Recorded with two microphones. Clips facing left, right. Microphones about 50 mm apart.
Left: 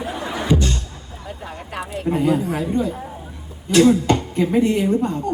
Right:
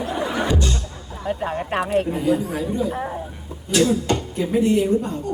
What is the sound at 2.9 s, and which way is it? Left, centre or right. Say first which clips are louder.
Speech: right 2 dB; right.